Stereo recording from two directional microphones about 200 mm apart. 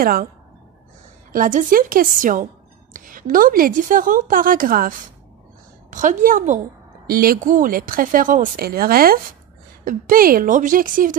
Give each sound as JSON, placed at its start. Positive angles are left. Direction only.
{"t": 0.0, "sound": "speech", "side_deg": -45}
{"t": 1.3, "sound": "a woman's voice", "side_deg": -40}